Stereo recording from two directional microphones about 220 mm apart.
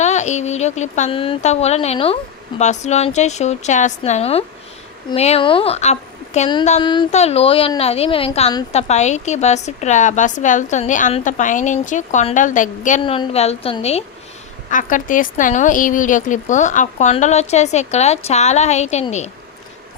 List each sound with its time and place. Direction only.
0.0 s a woman's voice: 30° left (ahead or behind)
13.0 s a woman's voice: 25° left (ahead or behind)